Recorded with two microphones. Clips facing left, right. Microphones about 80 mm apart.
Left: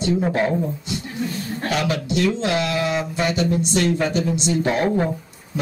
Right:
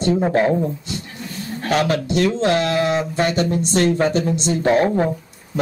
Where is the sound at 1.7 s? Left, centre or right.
Right.